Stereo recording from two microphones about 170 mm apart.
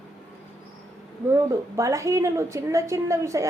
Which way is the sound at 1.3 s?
15° right (ahead or behind).